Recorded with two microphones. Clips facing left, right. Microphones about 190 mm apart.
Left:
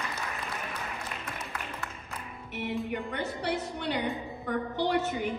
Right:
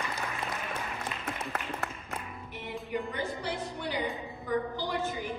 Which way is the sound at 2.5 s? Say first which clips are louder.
Left 4 dB; 65° left (ahead or behind).